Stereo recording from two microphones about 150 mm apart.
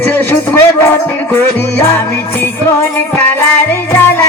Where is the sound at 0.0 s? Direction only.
15° left (ahead or behind).